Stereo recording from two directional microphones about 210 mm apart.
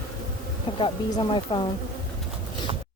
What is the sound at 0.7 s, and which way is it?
Speech, 20° left (ahead or behind).